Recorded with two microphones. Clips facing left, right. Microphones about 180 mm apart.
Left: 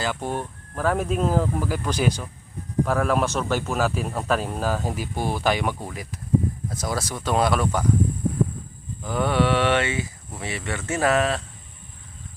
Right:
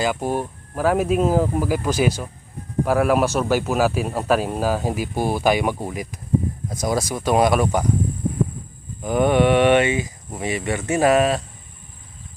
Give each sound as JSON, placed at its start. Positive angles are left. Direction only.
{"t": 0.0, "sound": "speech", "side_deg": -10}
{"t": 9.0, "sound": "speech", "side_deg": -20}